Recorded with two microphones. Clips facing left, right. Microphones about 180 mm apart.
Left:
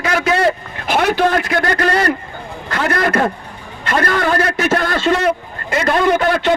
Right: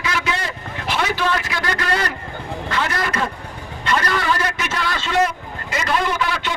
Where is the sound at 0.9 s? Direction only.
55° left (ahead or behind).